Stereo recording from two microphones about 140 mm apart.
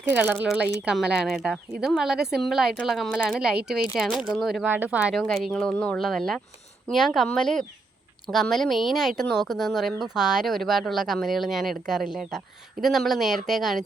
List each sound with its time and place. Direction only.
0.1 s speech: 15° right (ahead or behind); by 4.6 s centre (ahead or behind)
4.6 s speech: 15° right (ahead or behind)
5.3 s speech: centre (ahead or behind)